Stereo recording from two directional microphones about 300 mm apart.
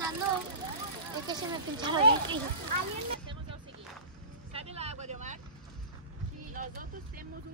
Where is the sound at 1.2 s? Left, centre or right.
Centre.